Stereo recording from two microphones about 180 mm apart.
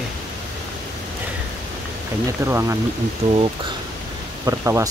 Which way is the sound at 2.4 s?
15° right (ahead or behind).